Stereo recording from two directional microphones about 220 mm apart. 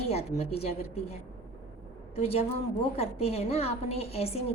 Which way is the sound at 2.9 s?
25° left (ahead or behind).